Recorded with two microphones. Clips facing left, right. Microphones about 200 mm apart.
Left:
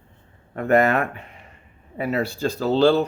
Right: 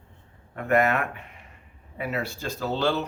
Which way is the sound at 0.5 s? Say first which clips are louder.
Left 4 dB; 35° left (ahead or behind).